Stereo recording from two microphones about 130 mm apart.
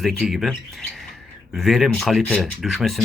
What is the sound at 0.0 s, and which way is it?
Speech, centre (ahead or behind).